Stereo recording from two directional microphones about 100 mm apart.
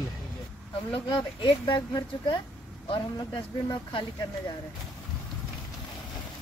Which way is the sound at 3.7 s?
55° left (ahead or behind).